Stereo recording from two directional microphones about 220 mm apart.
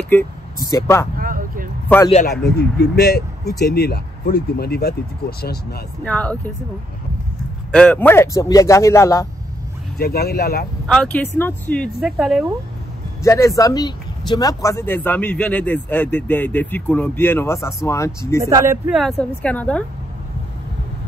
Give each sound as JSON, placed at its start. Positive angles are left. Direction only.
{"t": 0.1, "sound": "speech", "side_deg": 10}
{"t": 1.1, "sound": "vehicle", "side_deg": -40}
{"t": 2.6, "sound": "speech", "side_deg": 45}
{"t": 6.0, "sound": "speech", "side_deg": 5}
{"t": 7.7, "sound": "speech", "side_deg": 5}
{"t": 9.9, "sound": "speech", "side_deg": 45}
{"t": 10.9, "sound": "speech", "side_deg": 5}
{"t": 13.2, "sound": "speech", "side_deg": 15}
{"t": 18.4, "sound": "speech", "side_deg": -15}
{"t": 18.9, "sound": "speech", "side_deg": 0}